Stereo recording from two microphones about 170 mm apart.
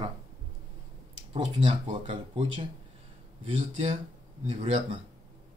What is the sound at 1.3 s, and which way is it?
Speech, 40° right (ahead or behind).